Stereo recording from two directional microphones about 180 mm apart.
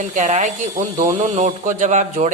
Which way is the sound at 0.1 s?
40° right (ahead or behind).